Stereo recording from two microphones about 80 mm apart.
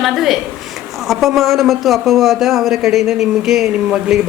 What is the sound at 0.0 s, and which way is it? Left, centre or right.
A woman's voice, centre.